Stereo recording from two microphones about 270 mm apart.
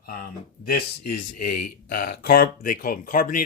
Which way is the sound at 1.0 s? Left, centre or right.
Left.